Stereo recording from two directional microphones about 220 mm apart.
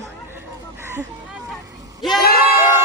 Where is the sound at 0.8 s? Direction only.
10° right (ahead or behind).